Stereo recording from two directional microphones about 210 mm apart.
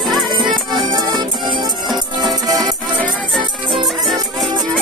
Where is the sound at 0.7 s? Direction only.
20° right (ahead or behind).